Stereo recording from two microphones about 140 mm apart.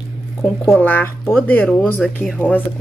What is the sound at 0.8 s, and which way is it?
Speech, 15° left (ahead or behind).